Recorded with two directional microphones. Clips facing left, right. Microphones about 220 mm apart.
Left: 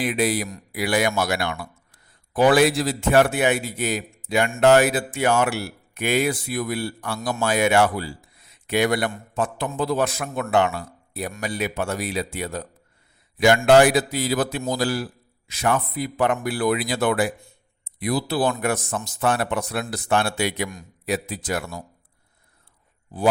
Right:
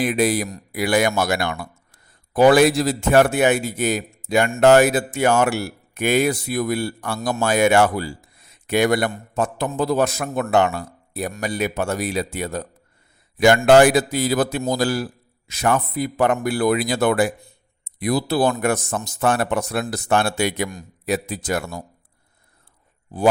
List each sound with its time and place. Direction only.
0.0 s a man's voice: 45° right (ahead or behind)